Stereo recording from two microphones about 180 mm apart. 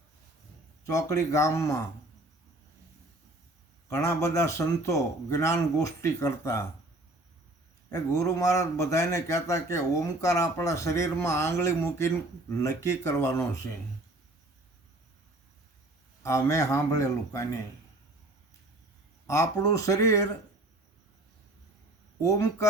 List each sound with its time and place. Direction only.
0.9 s a man's voice: 20° left (ahead or behind)
3.8 s a man's voice: 15° left (ahead or behind)
7.9 s a man's voice: 20° left (ahead or behind)
16.2 s a man's voice: 15° left (ahead or behind)
19.3 s a man's voice: 15° left (ahead or behind)
22.2 s a man's voice: 20° left (ahead or behind)